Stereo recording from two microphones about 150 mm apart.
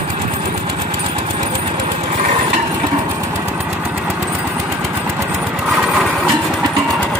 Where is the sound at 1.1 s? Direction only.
35° right (ahead or behind).